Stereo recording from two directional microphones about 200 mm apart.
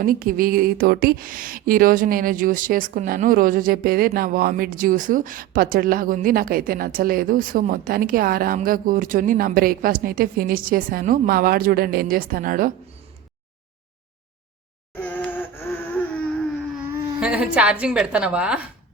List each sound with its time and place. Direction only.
0.0 s a woman's voice: 45° right (ahead or behind)
14.9 s a sound: 10° left (ahead or behind)
16.7 s a woman's voice: 10° right (ahead or behind)